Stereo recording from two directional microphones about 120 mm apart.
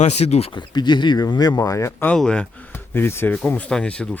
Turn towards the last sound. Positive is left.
turn(degrees=10)  # may be behind; listen again after turning